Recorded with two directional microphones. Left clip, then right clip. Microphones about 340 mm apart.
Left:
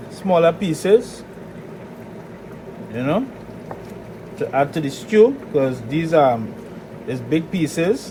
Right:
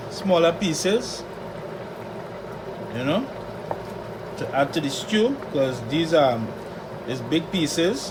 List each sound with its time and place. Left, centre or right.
0.3 s speech: centre
2.9 s speech: centre
4.5 s speech: centre